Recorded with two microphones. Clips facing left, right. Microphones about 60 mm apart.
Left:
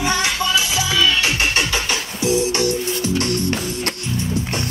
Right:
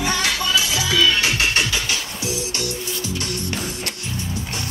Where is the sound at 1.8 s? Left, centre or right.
Left.